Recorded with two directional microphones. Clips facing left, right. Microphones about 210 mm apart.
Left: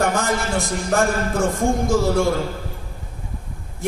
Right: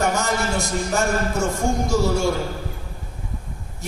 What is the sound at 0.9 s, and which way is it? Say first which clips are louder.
A man's voice: left 3 dB; 55° left (ahead or behind).